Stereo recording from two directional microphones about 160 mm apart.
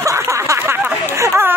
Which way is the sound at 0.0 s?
20° right (ahead or behind).